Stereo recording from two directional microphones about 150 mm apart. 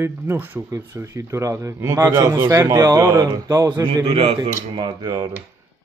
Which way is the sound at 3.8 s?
30° right (ahead or behind).